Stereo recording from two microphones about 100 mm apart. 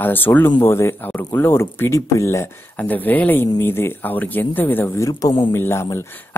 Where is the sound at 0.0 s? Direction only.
20° left (ahead or behind).